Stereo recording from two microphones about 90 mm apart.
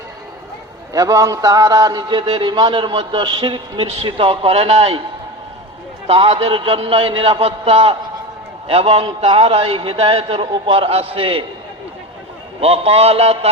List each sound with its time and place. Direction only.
0.9 s a man's voice: 40° right (ahead or behind); by 5.0 s 90° right
6.1 s a man's voice: 90° right
12.5 s a man's voice: 90° right